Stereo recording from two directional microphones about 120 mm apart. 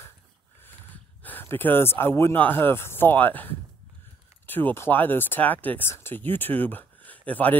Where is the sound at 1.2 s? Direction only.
15° left (ahead or behind).